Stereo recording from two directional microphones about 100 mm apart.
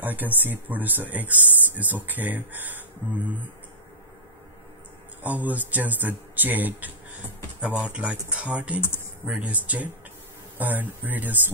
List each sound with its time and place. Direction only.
0.0 s speech: 20° right (ahead or behind)
5.2 s speech: 15° right (ahead or behind)